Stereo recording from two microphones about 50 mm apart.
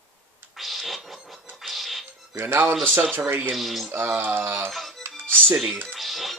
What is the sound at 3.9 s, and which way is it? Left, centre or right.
Speech, right.